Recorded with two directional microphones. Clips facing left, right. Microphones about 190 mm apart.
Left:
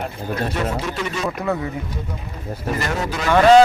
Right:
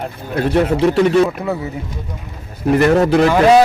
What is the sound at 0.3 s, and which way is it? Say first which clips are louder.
Speech: right 10 dB; 65° right (ahead or behind).